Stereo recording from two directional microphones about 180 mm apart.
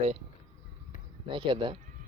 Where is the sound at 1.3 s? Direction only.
30° right (ahead or behind).